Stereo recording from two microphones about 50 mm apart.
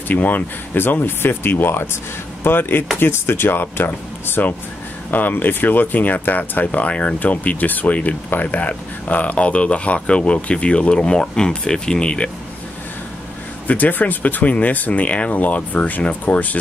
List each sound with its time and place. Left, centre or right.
0.1 s speech: left; by 12.3 s centre
13.7 s speech: left